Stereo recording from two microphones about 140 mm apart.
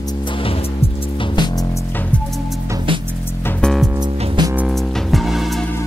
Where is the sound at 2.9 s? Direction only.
35° right (ahead or behind).